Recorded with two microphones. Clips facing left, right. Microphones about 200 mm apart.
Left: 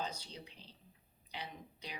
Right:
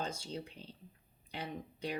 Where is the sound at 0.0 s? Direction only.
50° right (ahead or behind).